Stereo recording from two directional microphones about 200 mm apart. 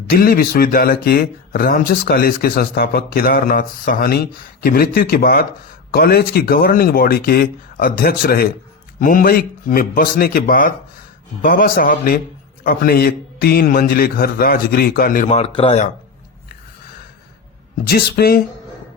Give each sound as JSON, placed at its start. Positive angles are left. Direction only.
{"t": 0.2, "sound": "speech", "side_deg": 50}
{"t": 17.8, "sound": "speech", "side_deg": 50}